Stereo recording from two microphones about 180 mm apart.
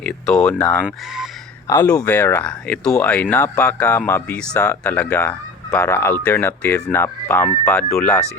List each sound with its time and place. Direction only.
0.0 s speech: 5° left (ahead or behind)
1.6 s speech: 15° left (ahead or behind)